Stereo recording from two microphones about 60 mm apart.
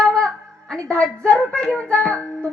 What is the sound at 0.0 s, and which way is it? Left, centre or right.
Music, centre.